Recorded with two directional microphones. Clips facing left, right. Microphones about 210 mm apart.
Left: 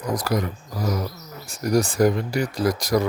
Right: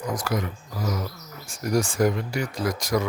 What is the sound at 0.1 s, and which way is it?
Speech, 40° left (ahead or behind).